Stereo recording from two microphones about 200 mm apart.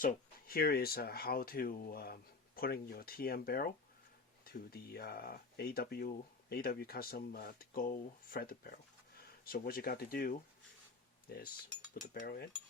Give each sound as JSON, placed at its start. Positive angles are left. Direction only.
{"t": 0.0, "sound": "speech", "side_deg": 45}